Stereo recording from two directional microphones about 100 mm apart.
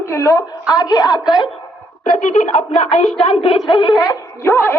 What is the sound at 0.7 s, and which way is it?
Speech, 40° left (ahead or behind).